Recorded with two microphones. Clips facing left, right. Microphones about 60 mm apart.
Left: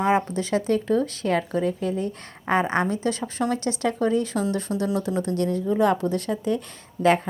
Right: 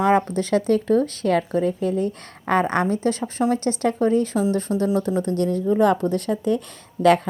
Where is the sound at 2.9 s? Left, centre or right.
Right.